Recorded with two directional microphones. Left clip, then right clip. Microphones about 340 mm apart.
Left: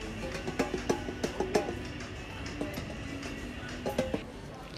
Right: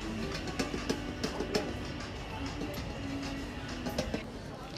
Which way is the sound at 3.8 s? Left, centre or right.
Centre.